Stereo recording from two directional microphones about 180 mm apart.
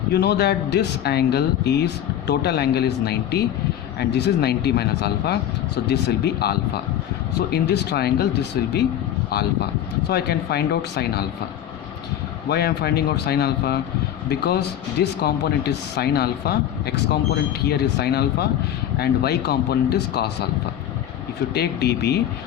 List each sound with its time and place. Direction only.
0.1 s speech: 65° left (ahead or behind)
12.5 s speech: 65° left (ahead or behind)
21.5 s speech: 65° left (ahead or behind)